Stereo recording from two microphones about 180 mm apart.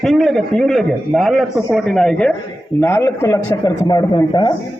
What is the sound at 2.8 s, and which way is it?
A man's voice, 15° left (ahead or behind).